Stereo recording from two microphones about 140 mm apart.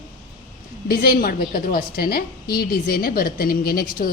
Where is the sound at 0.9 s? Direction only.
90° left.